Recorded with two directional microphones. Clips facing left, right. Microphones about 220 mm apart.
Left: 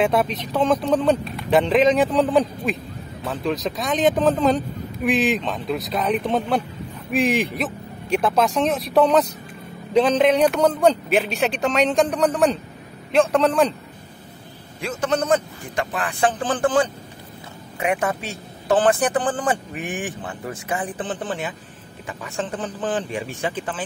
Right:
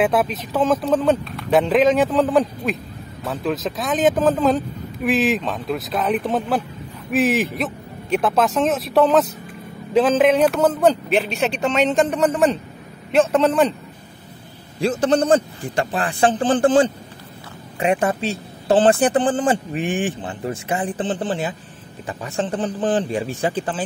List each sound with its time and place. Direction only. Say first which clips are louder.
0.0 s speech: right 1 dB; 5° right (ahead or behind)
14.8 s a man's voice: right 5 dB; 35° right (ahead or behind)